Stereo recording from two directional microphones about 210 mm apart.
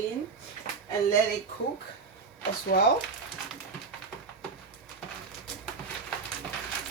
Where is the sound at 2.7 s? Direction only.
45° left (ahead or behind).